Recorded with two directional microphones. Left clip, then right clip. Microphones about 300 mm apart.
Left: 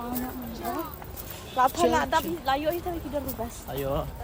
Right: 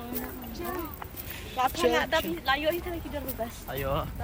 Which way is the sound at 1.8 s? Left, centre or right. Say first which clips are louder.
Left 2 dB; centre.